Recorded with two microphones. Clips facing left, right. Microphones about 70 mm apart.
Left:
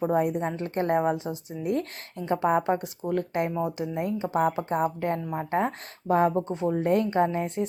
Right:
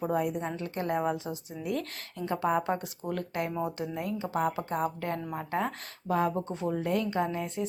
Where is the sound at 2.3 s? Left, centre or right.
Left.